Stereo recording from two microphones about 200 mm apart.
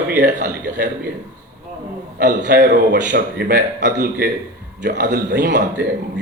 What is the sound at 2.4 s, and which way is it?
Speech, 40° right (ahead or behind).